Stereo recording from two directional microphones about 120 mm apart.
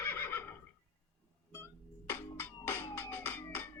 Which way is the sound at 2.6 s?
20° left (ahead or behind).